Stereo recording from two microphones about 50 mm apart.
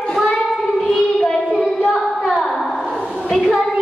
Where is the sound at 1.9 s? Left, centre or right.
Centre.